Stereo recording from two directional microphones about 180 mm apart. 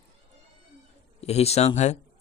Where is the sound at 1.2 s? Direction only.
35° left (ahead or behind).